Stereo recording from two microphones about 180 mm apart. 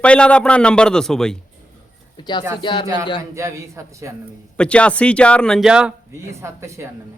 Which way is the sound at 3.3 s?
15° right (ahead or behind).